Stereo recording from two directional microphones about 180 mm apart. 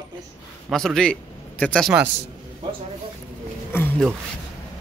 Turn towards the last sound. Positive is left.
turn(degrees=10)  # may be behind; listen again after turning